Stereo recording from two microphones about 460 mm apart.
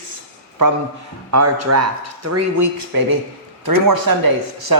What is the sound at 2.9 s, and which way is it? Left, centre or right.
A man's voice, right.